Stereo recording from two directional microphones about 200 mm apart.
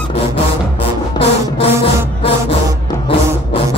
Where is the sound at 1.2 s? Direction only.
30° left (ahead or behind).